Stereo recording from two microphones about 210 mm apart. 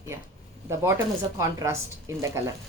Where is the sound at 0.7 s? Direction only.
15° right (ahead or behind).